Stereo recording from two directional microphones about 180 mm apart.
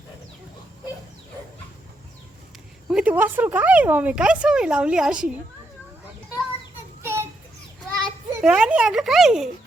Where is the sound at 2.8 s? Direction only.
5° right (ahead or behind).